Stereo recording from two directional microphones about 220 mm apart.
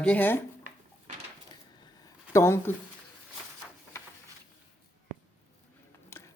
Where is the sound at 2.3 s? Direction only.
10° left (ahead or behind).